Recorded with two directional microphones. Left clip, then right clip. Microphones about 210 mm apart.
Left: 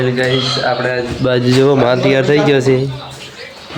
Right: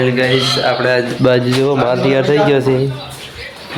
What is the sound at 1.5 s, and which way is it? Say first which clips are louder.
Speech: left 2 dB; 20° left (ahead or behind).